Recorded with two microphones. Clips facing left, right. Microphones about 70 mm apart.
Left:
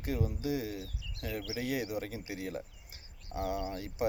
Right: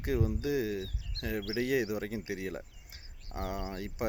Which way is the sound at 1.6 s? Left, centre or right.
Right.